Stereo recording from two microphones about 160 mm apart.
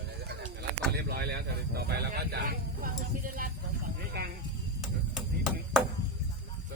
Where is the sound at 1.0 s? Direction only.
85° right; by 3.5 s 60° right (ahead or behind).